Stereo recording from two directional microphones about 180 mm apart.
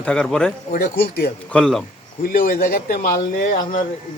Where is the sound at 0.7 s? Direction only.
60° left (ahead or behind).